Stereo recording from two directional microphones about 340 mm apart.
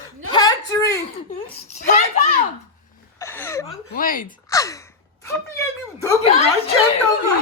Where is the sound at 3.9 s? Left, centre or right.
Left.